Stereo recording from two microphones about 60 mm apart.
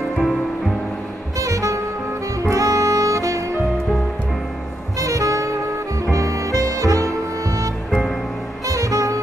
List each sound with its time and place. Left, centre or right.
0.2 s music: centre
1.4 s music: right
2.4 s saxophone: right
4.9 s music: right